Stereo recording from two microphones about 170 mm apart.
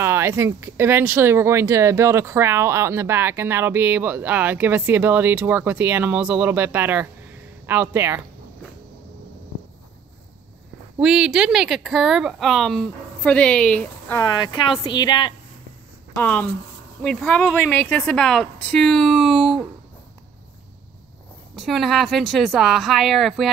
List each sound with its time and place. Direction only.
0.0 s speech: 15° right (ahead or behind)
11.0 s speech: 5° right (ahead or behind)
14.2 s a woman's voice: 25° left (ahead or behind)
16.2 s a woman's voice: 10° left (ahead or behind)
21.5 s speech: centre (ahead or behind)